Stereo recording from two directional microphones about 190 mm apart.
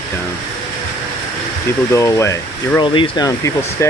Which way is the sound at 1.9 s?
15° left (ahead or behind).